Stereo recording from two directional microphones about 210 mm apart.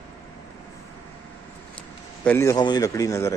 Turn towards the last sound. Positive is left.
turn(degrees=15)  # may be behind; listen again after turning